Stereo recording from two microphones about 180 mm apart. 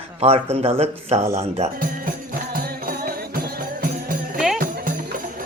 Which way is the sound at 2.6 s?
55° right (ahead or behind).